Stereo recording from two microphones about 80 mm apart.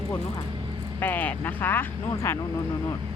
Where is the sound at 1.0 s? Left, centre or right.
Left.